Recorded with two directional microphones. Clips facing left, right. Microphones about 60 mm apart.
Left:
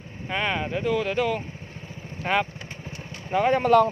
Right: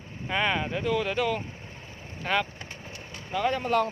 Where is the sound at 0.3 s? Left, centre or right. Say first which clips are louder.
Even; centre.